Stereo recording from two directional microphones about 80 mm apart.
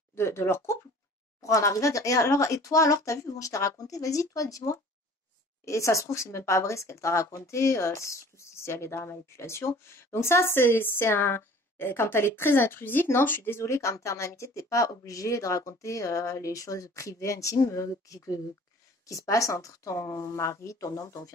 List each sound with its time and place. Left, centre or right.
0.1 s speech: left
1.4 s speech: left